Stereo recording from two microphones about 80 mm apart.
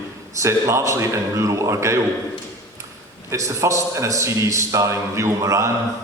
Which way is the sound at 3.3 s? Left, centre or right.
Right.